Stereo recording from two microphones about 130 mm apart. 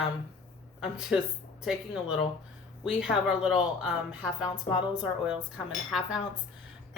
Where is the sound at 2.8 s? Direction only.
5° right (ahead or behind).